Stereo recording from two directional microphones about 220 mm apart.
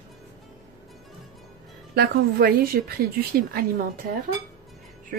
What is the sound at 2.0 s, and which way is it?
A woman's voice, 45° right (ahead or behind).